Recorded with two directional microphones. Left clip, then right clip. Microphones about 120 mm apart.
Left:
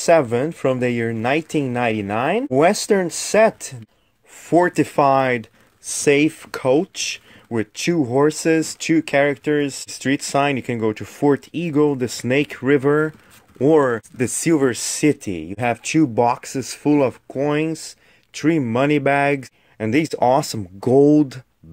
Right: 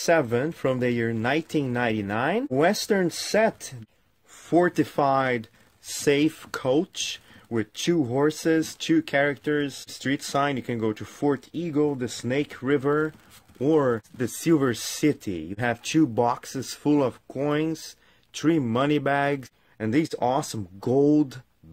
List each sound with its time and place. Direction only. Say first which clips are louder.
0.0 s speech: left 6 dB; 20° left (ahead or behind); by 14.0 s 45° left (ahead or behind)
14.1 s speech: left 5 dB; 25° left (ahead or behind)